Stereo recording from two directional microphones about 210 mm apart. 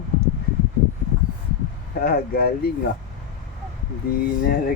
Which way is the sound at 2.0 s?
45° left (ahead or behind).